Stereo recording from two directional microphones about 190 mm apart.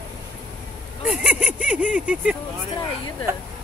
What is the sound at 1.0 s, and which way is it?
Speech, 5° right (ahead or behind).